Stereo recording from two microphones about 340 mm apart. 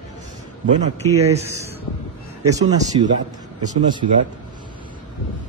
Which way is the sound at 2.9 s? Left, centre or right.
Centre.